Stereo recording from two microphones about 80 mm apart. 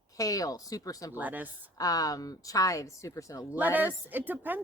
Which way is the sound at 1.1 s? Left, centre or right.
Right.